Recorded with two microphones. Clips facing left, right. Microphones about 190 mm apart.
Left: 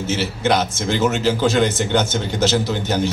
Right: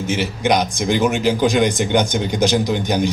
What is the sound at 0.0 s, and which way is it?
Speech, 15° right (ahead or behind).